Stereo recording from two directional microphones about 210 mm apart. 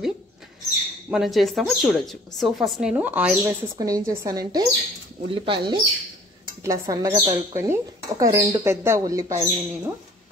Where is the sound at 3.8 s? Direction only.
15° right (ahead or behind).